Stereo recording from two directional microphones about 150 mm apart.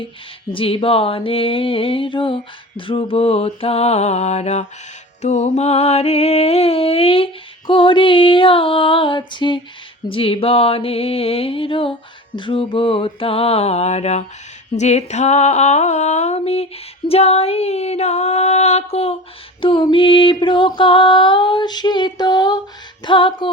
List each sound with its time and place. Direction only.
0.5 s mantra: 35° left (ahead or behind)
5.2 s music: 50° left (ahead or behind)
7.7 s mantra: 35° left (ahead or behind)
14.8 s music: 50° left (ahead or behind)
19.6 s mantra: 35° left (ahead or behind)